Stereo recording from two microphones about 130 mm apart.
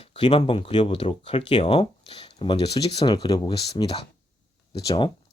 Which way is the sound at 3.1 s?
30° left (ahead or behind).